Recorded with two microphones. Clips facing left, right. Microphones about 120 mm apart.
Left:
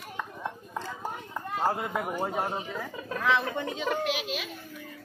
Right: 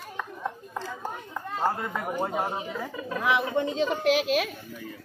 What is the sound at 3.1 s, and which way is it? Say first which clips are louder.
Speech: right 2 dB; 15° right (ahead or behind).